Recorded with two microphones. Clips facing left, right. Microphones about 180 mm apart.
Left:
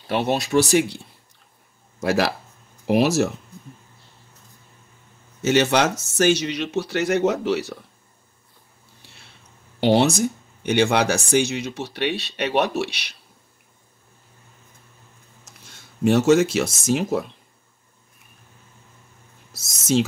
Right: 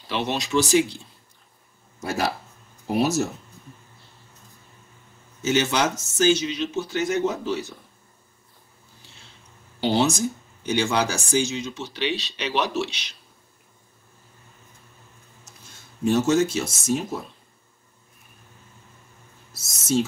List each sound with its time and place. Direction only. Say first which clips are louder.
0.1 s speech: left 4 dB; 55° left (ahead or behind)
2.0 s speech: left 5 dB; 80° left
5.4 s speech: left 4 dB; 65° left (ahead or behind)
9.8 s speech: left 4 dB; 65° left (ahead or behind)
16.0 s speech: left 4 dB; 75° left (ahead or behind)
19.6 s speech: left 3 dB; 90° left